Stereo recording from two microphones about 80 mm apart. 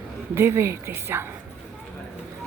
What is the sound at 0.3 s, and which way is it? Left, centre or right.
Speech, right.